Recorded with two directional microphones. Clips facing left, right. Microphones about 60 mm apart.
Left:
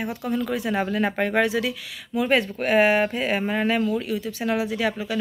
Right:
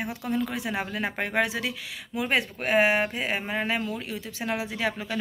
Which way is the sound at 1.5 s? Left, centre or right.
Right.